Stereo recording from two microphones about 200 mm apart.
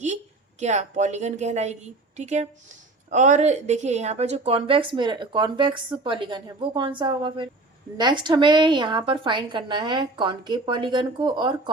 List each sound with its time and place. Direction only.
0.6 s a woman's voice: 35° right (ahead or behind)